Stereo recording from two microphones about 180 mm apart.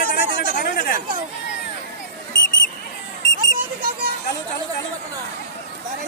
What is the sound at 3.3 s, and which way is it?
Children playing, 55° right (ahead or behind).